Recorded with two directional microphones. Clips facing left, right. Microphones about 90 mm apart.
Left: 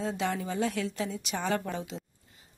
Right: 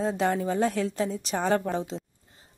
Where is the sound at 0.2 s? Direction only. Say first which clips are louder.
Right 6 dB; 40° right (ahead or behind).